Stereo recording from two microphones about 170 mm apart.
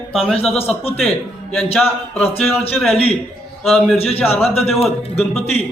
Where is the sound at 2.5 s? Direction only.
35° left (ahead or behind).